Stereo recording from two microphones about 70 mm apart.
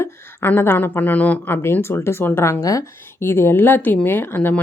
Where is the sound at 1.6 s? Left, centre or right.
Left.